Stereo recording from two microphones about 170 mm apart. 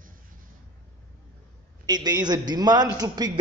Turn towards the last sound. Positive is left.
turn(degrees=-25)  # may be behind; listen again after turning